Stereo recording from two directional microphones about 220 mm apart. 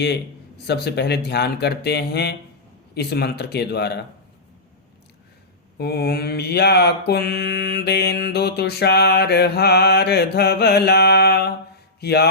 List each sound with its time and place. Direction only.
0.7 s mantra: 50° left (ahead or behind)
5.7 s mantra: 45° left (ahead or behind)
11.9 s speech: 45° left (ahead or behind)